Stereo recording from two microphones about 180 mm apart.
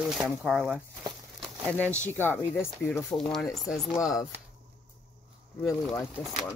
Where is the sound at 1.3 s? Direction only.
10° left (ahead or behind).